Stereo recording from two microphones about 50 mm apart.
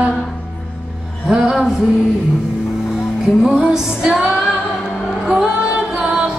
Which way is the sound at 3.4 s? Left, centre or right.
Centre.